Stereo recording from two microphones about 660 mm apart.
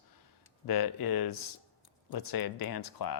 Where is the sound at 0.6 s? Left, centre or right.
Left.